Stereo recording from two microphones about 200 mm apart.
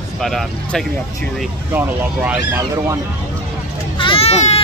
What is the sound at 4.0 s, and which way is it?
Baby cry, 30° left (ahead or behind).